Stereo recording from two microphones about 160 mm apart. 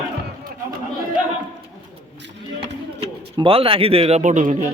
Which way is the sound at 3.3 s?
35° right (ahead or behind).